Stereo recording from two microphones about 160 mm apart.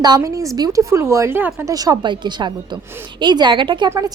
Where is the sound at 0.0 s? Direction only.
25° right (ahead or behind).